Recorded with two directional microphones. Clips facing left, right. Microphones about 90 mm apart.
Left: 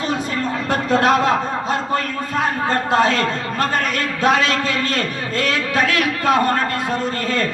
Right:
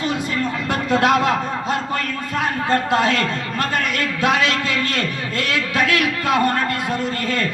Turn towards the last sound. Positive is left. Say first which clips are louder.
# left 1 dB
turn(degrees=30)  # may be behind; listen again after turning